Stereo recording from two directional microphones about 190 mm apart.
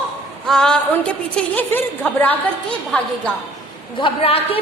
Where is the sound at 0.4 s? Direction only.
5° left (ahead or behind).